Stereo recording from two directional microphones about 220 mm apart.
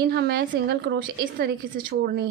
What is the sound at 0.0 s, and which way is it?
A woman's voice, 50° right (ahead or behind).